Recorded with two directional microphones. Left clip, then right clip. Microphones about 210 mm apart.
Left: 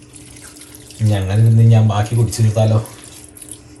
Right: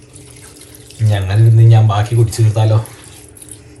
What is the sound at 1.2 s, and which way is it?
A man's voice, 15° left (ahead or behind).